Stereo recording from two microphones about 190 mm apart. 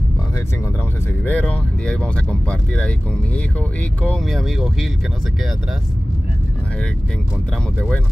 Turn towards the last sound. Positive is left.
turn(degrees=5)  # may be behind; listen again after turning